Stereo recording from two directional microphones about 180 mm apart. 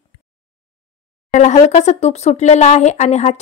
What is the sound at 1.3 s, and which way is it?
Speech, 40° left (ahead or behind).